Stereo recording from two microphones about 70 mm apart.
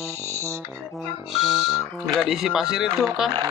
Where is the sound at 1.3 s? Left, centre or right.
Centre.